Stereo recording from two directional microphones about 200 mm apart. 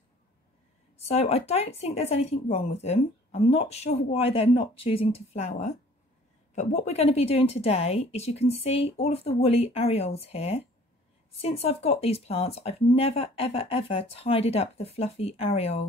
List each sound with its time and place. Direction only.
0.9 s speech: 30° left (ahead or behind)